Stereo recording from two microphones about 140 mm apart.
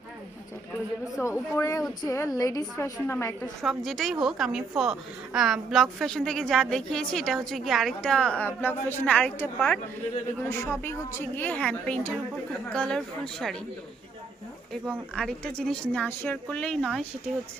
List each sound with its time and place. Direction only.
1.2 s a woman's voice: 20° left (ahead or behind)
3.6 s a woman's voice: centre (ahead or behind)
15.1 s a woman's voice: 5° left (ahead or behind)